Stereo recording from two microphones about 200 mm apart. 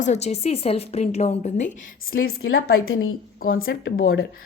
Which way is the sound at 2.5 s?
90° left.